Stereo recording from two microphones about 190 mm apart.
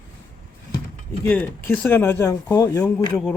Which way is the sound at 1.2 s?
10° left (ahead or behind).